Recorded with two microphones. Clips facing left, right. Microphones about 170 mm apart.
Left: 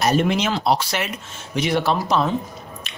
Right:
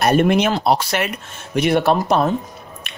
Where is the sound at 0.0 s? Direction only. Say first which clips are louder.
Right 4 dB; 55° right (ahead or behind).